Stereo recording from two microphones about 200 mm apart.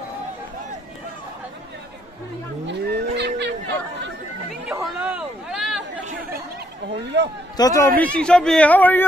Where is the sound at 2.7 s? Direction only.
55° right (ahead or behind).